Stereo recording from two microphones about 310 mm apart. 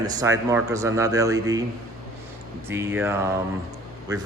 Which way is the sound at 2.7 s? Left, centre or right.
Centre.